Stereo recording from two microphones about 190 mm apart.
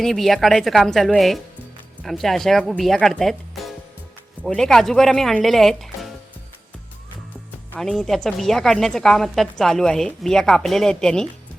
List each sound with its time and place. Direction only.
0.0 s a woman's voice: centre (ahead or behind)
7.8 s a woman's voice: centre (ahead or behind)